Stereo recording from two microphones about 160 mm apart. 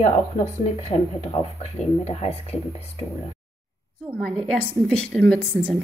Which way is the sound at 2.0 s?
40° left (ahead or behind).